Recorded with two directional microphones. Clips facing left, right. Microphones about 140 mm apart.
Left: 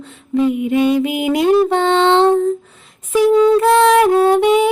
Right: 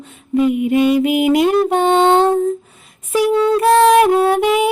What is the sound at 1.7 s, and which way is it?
Music, 15° right (ahead or behind).